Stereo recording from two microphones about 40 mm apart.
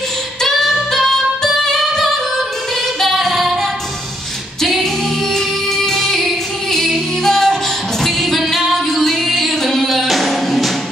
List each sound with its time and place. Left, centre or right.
0.4 s music: centre
3.0 s singing: centre
5.3 s music: centre